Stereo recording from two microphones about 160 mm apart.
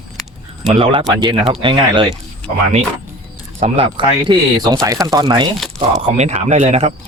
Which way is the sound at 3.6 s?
35° right (ahead or behind).